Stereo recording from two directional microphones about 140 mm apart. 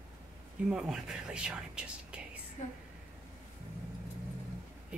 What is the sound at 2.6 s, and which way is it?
Speech, 55° left (ahead or behind).